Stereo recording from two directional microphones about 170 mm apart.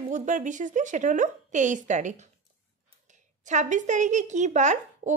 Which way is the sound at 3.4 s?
45° right (ahead or behind).